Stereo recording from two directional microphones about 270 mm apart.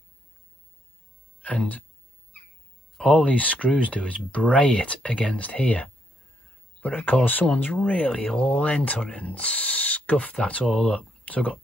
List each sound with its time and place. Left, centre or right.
1.4 s speech: centre
3.0 s speech: centre